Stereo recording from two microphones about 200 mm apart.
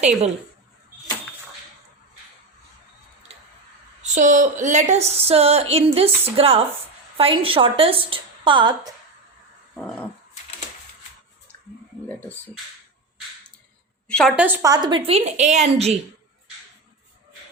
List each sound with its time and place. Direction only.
4.0 s a sound: 40° right (ahead or behind)
7.2 s a woman's voice: 25° right (ahead or behind)
9.7 s dog: 5° left (ahead or behind)
14.1 s a woman's voice: 5° left (ahead or behind)
14.3 s a woman's voice: 10° right (ahead or behind); by 16.0 s 35° right (ahead or behind)